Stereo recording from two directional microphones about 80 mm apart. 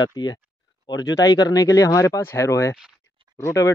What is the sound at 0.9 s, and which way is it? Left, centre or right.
Speech, left.